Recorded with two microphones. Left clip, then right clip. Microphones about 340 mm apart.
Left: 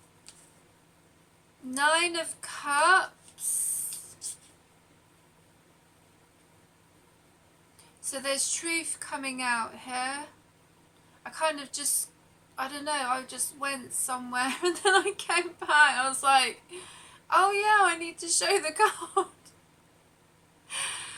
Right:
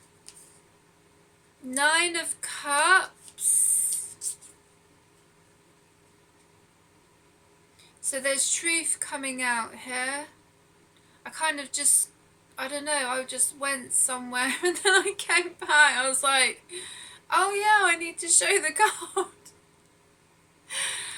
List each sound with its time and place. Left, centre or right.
1.7 s a woman's voice: centre
8.1 s a woman's voice: centre
20.7 s gasp: centre